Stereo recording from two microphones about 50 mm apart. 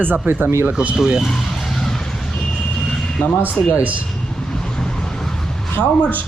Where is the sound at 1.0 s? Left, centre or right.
Centre.